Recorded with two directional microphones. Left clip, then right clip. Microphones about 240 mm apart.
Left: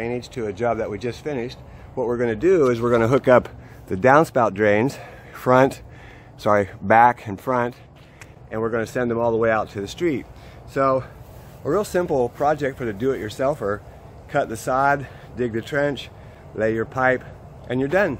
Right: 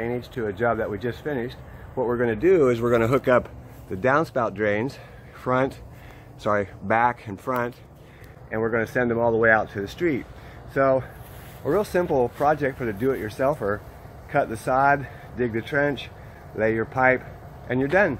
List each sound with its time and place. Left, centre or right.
0.0 s speech: centre; by 7.7 s left
8.5 s speech: centre